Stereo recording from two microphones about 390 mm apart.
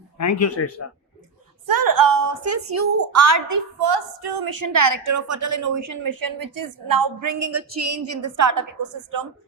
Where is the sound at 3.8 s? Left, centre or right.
Right.